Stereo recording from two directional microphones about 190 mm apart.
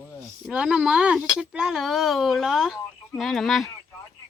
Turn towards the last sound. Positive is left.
turn(degrees=0)  # may be behind; listen again after turning